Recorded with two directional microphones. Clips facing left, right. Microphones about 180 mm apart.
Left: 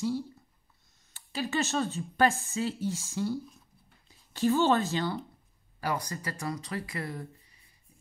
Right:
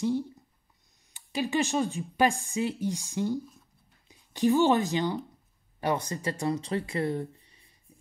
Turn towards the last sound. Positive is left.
turn(degrees=-30)  # may be behind; listen again after turning